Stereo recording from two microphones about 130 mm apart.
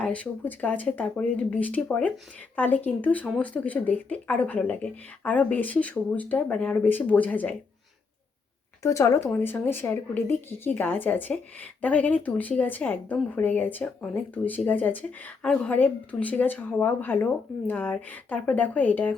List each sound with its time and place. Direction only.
0.0 s speech: 10° left (ahead or behind)
8.8 s speech: 25° left (ahead or behind)